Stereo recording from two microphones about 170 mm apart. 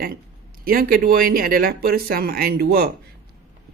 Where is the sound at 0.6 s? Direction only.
60° right (ahead or behind).